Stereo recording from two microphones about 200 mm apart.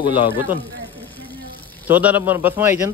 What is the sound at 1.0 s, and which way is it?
Vehicle, 10° left (ahead or behind).